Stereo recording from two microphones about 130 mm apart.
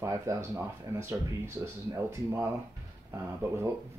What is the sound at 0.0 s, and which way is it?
Speech, 20° right (ahead or behind).